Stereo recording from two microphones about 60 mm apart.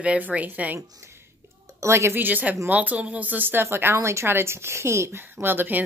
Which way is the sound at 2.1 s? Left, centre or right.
Right.